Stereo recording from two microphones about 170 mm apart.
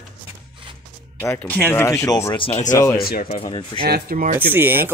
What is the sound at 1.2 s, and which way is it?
Speech, 10° left (ahead or behind).